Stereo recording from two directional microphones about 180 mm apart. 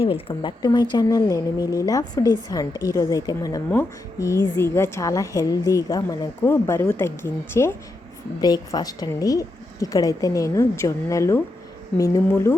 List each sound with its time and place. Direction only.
0.0 s a woman's voice: 30° left (ahead or behind); by 12.5 s 15° left (ahead or behind)